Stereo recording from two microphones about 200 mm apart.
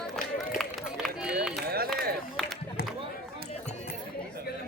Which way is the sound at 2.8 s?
55° left (ahead or behind).